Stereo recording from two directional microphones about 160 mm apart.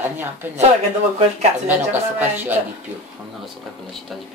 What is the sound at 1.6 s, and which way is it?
Speech, 10° right (ahead or behind).